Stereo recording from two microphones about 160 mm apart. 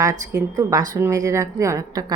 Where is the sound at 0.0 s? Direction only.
25° right (ahead or behind).